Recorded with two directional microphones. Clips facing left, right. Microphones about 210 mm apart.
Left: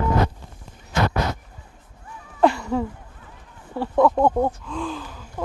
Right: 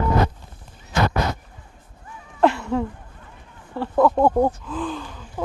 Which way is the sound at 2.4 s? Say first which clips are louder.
Even; centre (ahead or behind).